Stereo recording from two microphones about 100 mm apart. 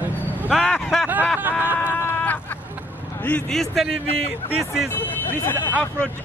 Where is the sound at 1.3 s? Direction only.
20° right (ahead or behind).